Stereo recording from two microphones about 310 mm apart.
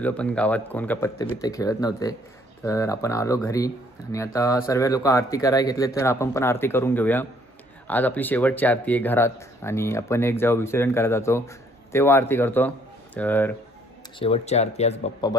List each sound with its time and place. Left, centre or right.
0.0 s speech: centre
14.2 s speech: centre